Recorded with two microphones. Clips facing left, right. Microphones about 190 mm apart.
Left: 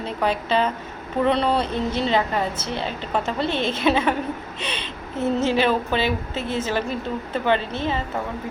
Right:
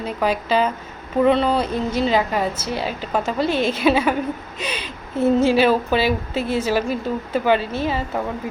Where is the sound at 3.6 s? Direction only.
25° left (ahead or behind).